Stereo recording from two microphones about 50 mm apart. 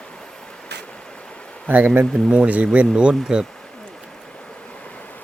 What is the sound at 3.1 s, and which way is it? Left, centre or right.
Speech, centre.